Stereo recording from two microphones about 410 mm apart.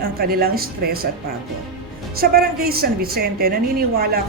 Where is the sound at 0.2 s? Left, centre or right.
Right.